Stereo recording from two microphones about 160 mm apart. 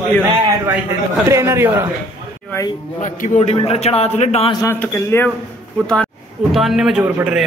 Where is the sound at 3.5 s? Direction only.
40° left (ahead or behind).